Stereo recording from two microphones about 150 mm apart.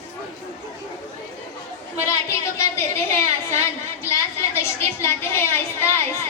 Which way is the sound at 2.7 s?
20° left (ahead or behind).